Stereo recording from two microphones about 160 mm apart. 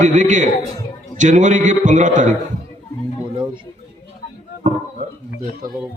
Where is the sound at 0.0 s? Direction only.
50° right (ahead or behind).